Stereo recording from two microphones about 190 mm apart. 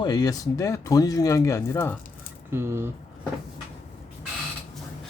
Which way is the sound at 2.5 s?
15° right (ahead or behind).